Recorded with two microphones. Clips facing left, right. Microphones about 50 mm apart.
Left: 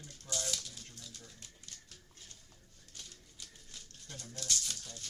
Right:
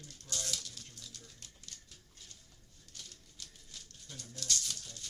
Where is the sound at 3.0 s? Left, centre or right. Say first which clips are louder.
Even; centre.